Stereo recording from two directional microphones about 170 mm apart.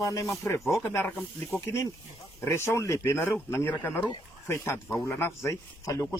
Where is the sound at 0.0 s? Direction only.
20° left (ahead or behind).